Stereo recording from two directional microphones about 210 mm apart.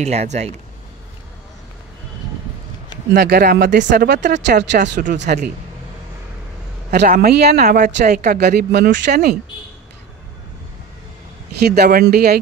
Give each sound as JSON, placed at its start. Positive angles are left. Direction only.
{"t": 0.0, "sound": "speech", "side_deg": -30}
{"t": 3.1, "sound": "speech", "side_deg": -50}
{"t": 6.9, "sound": "speech", "side_deg": -50}
{"t": 7.6, "sound": "speech", "side_deg": -35}
{"t": 8.2, "sound": "speech", "side_deg": -50}
{"t": 11.6, "sound": "speech", "side_deg": -50}